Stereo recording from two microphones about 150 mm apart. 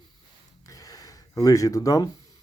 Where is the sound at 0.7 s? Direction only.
25° left (ahead or behind).